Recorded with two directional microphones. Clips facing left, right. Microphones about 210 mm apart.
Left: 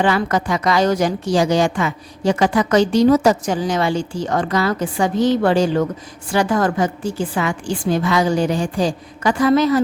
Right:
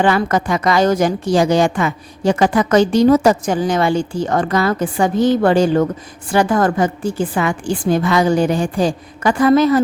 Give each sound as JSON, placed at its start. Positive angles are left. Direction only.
{"t": 0.0, "sound": "a woman's voice", "side_deg": -50}